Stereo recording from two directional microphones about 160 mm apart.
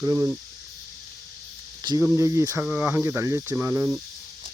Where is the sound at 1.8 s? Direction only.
25° right (ahead or behind).